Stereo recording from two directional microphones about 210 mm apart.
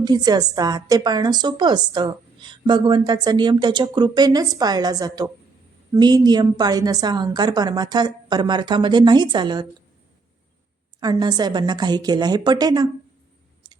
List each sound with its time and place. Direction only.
0.0 s a woman's voice: 20° right (ahead or behind)
11.0 s a woman's voice: 20° right (ahead or behind)